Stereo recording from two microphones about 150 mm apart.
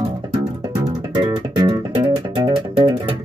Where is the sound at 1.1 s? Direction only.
30° right (ahead or behind).